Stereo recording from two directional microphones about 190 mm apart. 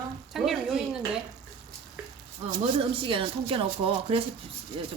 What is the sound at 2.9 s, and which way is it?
Speech, 25° right (ahead or behind).